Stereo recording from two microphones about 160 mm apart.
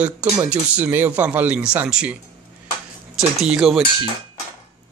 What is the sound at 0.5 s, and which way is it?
Speech, 10° right (ahead or behind).